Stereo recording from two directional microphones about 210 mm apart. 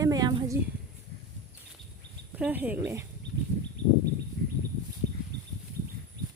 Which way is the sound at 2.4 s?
5° right (ahead or behind).